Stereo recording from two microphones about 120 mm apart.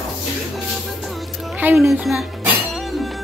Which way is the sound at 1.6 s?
20° right (ahead or behind).